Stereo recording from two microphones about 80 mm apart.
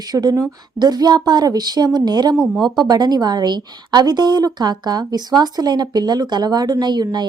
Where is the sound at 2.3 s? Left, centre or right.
Centre.